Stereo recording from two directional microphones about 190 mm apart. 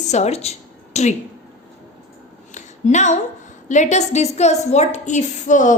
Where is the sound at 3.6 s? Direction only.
40° left (ahead or behind).